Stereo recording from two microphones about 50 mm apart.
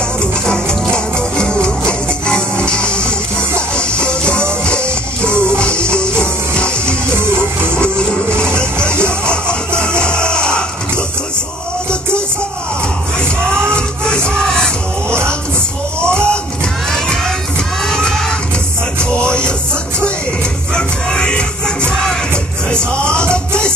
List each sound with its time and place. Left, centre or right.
0.5 s music: centre
9.2 s music: centre
13.7 s music: centre
17.8 s a sound: centre
19.2 s music: centre
20.7 s music: centre